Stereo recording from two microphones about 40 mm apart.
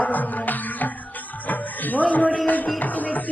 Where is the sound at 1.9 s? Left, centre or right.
Left.